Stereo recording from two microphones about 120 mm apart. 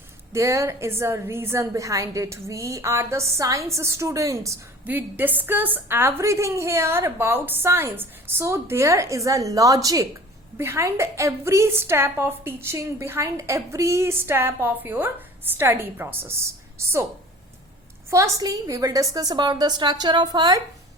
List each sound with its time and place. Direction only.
0.3 s a woman's voice: 25° right (ahead or behind)
4.9 s a woman's voice: 15° right (ahead or behind)
18.1 s a woman's voice: 30° right (ahead or behind)